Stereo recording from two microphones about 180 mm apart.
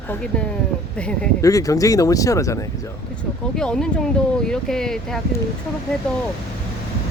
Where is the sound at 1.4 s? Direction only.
20° left (ahead or behind).